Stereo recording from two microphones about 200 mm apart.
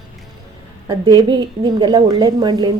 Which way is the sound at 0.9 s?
20° right (ahead or behind).